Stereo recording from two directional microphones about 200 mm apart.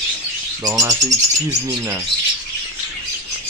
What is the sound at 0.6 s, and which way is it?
Speech, 15° right (ahead or behind).